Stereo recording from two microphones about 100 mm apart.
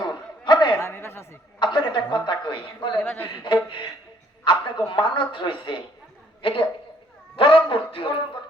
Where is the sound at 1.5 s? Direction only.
50° left (ahead or behind).